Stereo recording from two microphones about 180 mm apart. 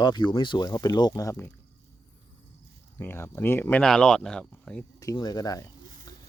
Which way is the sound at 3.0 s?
10° left (ahead or behind).